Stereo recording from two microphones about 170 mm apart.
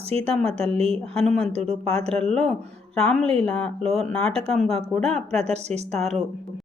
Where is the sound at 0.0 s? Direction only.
35° right (ahead or behind).